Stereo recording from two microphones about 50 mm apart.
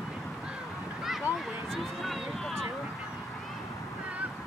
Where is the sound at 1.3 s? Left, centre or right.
Right.